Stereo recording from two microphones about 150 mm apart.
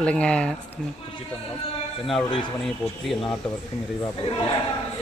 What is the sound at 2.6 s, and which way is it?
Speech, centre (ahead or behind).